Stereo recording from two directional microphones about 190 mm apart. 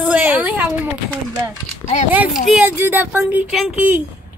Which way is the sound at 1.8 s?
15° left (ahead or behind).